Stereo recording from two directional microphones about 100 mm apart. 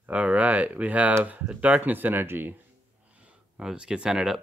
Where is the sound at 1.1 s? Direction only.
20° right (ahead or behind).